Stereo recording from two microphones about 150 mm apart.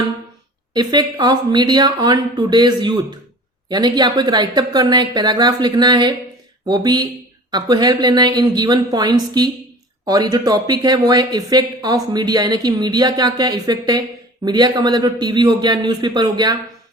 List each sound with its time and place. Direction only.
0.7 s speech: 25° right (ahead or behind)